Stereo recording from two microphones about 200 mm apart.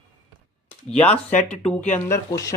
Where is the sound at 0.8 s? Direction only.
5° left (ahead or behind).